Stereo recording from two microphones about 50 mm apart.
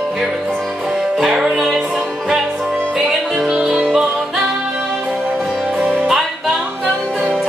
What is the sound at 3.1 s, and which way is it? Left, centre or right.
Music, centre.